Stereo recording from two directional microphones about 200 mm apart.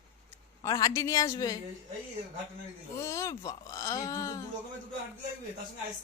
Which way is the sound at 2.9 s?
15° left (ahead or behind).